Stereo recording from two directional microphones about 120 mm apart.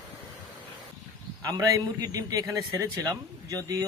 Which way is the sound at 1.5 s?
30° right (ahead or behind).